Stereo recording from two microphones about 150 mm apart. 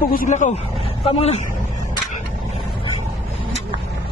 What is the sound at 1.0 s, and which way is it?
Speech, 45° left (ahead or behind).